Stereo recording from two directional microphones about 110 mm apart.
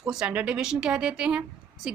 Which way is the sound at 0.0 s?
5° right (ahead or behind).